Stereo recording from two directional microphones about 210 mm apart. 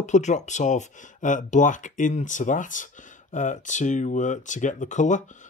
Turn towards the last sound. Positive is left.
turn(degrees=35)  # may be behind; listen again after turning